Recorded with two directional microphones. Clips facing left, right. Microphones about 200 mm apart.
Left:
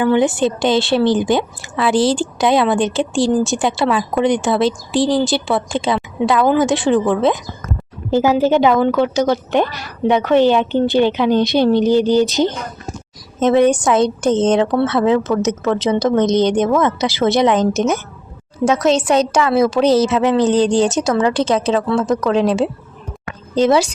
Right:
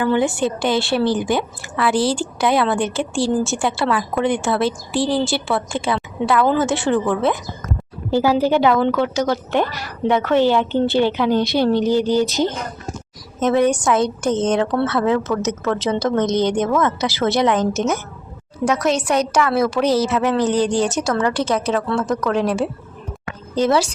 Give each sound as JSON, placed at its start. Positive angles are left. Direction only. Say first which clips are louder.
{"t": 0.0, "sound": "a woman's voice", "louder": "left 4 dB", "side_deg": 20}